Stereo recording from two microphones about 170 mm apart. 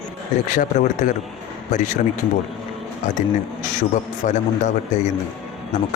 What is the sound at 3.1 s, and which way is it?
Speech, 45° left (ahead or behind).